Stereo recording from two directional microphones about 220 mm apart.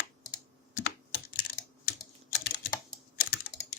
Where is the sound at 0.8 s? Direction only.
50° left (ahead or behind).